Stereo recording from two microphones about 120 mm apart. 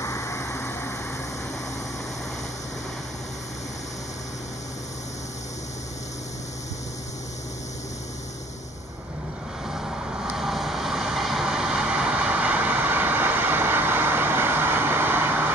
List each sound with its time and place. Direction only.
0.0 s vehicle: 25° left (ahead or behind)
9.8 s vehicle: 5° right (ahead or behind)